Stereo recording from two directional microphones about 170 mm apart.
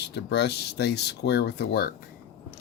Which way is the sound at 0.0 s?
75° left (ahead or behind).